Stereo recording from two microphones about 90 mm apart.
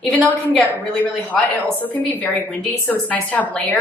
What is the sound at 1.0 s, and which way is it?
A woman's voice, 20° left (ahead or behind).